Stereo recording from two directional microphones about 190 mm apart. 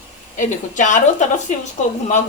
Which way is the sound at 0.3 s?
40° left (ahead or behind).